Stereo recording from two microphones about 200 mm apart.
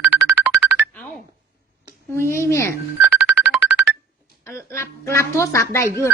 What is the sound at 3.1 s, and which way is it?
Music, 5° right (ahead or behind).